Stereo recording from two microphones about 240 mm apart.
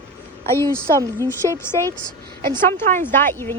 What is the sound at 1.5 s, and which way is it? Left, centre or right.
Speech, centre.